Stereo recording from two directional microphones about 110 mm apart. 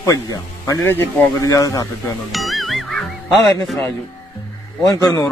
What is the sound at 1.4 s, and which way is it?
Speech, 30° left (ahead or behind).